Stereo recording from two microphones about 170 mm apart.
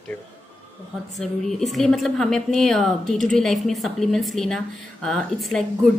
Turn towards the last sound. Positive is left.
turn(degrees=0)  # may be behind; listen again after turning